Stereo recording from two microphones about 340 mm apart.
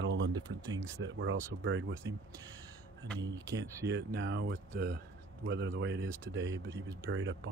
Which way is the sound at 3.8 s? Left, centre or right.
Right.